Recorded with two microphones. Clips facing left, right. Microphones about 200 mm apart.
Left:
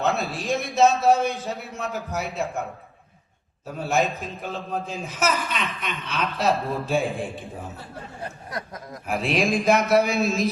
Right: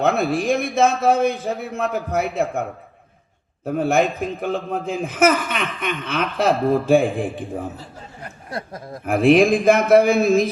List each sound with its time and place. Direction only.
0.0 s a man's voice: 55° right (ahead or behind)
3.7 s a man's voice: 55° right (ahead or behind)
8.4 s a sound: 30° right (ahead or behind)
9.0 s a man's voice: 50° right (ahead or behind)